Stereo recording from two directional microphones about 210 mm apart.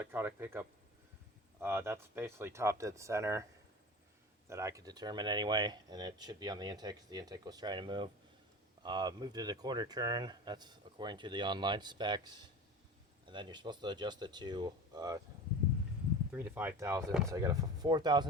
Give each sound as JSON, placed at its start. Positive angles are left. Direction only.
{"t": 0.0, "sound": "speech", "side_deg": -10}
{"t": 1.6, "sound": "speech", "side_deg": -10}
{"t": 4.4, "sound": "speech", "side_deg": -15}
{"t": 16.3, "sound": "speech", "side_deg": -10}